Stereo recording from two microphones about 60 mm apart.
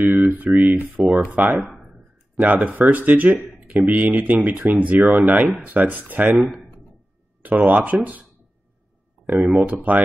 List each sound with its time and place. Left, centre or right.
0.0 s a sound: right
0.6 s speech: right
7.4 s speech: right